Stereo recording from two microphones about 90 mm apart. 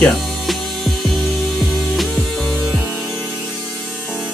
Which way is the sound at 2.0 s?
Centre (ahead or behind).